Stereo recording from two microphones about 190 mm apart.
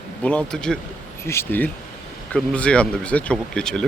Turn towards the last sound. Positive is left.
turn(degrees=5)  # may be behind; listen again after turning